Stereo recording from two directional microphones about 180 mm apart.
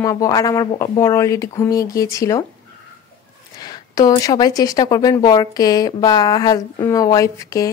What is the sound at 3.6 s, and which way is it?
A woman's voice, 20° left (ahead or behind).